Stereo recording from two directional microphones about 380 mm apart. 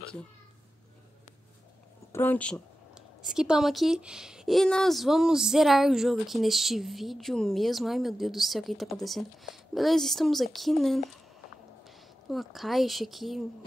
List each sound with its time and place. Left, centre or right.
2.1 s speech: centre
12.3 s speech: centre